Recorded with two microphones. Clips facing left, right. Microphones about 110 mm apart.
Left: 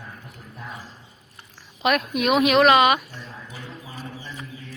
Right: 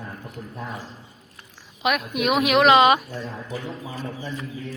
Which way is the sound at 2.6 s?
25° right (ahead or behind).